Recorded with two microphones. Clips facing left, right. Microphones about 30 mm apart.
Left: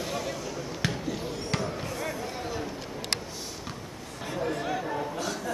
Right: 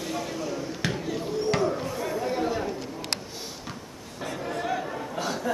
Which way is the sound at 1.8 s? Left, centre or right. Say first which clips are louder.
Right 3 dB; centre.